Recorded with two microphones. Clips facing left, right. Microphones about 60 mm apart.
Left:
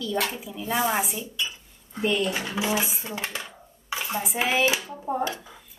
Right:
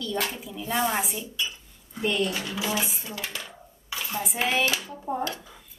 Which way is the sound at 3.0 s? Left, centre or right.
Left.